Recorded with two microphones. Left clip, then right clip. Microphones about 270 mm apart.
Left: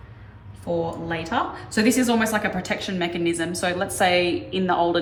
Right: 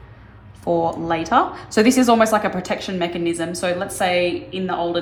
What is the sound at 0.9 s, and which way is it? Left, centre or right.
Speech, centre.